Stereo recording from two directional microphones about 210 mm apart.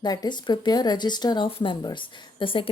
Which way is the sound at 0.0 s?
20° left (ahead or behind).